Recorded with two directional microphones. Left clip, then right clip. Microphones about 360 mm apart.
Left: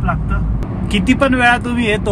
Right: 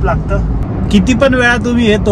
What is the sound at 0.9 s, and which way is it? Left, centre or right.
Speech, centre.